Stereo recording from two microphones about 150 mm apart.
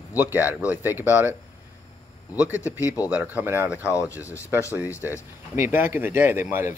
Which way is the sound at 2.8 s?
20° left (ahead or behind).